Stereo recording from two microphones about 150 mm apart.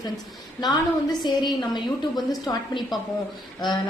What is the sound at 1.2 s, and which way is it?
A woman's voice, 30° left (ahead or behind).